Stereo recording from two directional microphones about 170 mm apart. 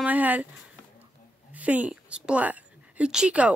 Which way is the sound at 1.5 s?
10° right (ahead or behind).